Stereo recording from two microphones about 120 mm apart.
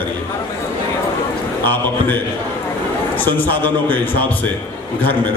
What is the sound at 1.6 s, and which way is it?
A man's voice, 15° left (ahead or behind).